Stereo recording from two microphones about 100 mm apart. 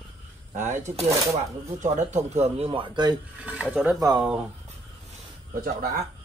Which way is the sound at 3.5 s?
15° right (ahead or behind).